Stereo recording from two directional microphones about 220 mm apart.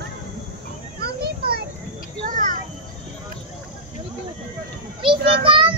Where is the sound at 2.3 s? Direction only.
35° right (ahead or behind).